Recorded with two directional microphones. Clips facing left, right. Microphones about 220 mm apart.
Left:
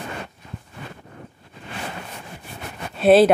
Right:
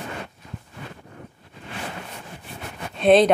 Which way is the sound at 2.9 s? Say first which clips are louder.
Left 2 dB; 5° left (ahead or behind).